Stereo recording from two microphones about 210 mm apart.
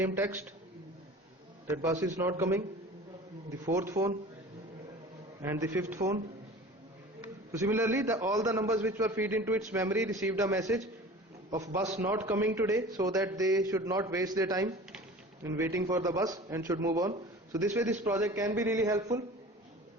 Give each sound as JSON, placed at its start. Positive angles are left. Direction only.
{"t": 0.0, "sound": "a man's voice", "side_deg": -10}
{"t": 1.7, "sound": "a man's voice", "side_deg": -15}
{"t": 4.0, "sound": "a man's voice", "side_deg": -35}
{"t": 5.4, "sound": "a man's voice", "side_deg": -15}
{"t": 7.5, "sound": "a man's voice", "side_deg": -15}